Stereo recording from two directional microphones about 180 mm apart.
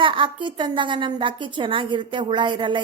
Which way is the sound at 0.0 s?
25° right (ahead or behind).